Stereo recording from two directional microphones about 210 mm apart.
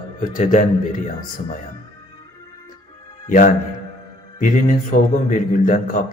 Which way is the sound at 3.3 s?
40° left (ahead or behind).